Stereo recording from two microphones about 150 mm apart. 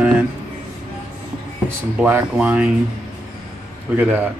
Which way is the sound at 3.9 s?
10° right (ahead or behind).